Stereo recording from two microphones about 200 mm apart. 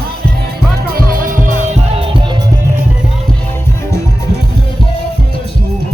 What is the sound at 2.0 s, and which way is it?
Music, 25° right (ahead or behind).